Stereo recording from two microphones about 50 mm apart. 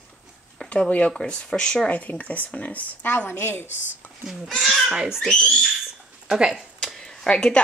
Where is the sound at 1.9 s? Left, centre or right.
Left.